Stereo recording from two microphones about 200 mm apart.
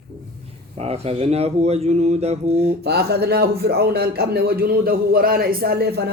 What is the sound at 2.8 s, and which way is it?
A man's voice, 55° right (ahead or behind).